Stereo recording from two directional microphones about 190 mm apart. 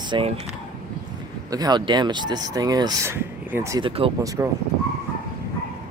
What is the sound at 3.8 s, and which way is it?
Speech, 25° right (ahead or behind).